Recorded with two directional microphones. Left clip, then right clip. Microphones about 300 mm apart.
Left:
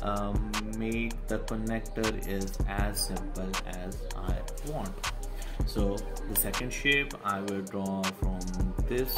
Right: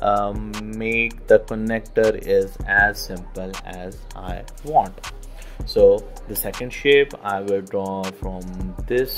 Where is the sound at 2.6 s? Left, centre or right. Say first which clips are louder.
Right 19 dB; right.